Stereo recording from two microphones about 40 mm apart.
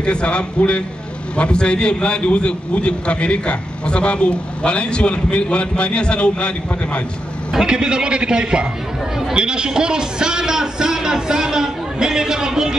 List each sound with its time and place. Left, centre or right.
0.0 s a man's voice: left
7.5 s a man's voice: centre